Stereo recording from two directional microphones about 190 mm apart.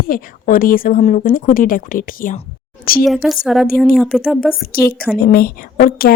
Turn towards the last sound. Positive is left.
turn(degrees=50)  # may be behind; listen again after turning